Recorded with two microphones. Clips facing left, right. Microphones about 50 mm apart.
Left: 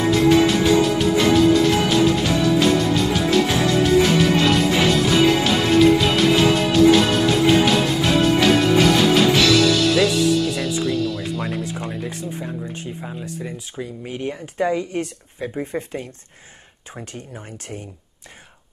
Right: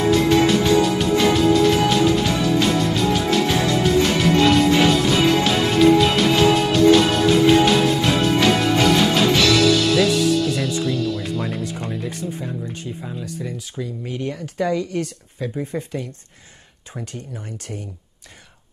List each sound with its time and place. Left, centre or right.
0.1 s music: centre
12.8 s speech: left